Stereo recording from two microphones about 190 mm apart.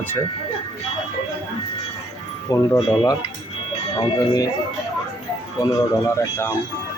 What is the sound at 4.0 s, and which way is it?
Speech, 20° left (ahead or behind).